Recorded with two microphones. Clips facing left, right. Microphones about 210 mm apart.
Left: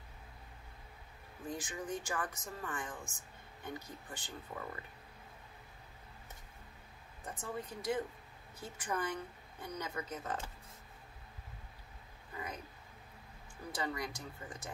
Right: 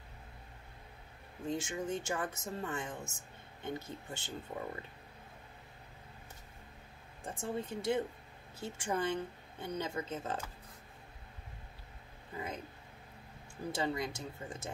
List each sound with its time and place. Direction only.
1.4 s speech: 25° right (ahead or behind)
7.2 s speech: 25° right (ahead or behind)
13.7 s speech: 25° right (ahead or behind)